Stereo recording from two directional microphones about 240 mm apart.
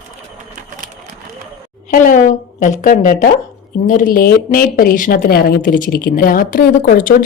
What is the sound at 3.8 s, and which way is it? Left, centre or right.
Speech, left.